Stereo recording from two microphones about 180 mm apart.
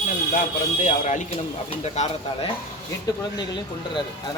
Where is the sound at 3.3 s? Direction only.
25° left (ahead or behind).